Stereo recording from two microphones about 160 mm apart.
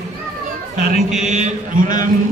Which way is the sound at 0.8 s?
55° right (ahead or behind).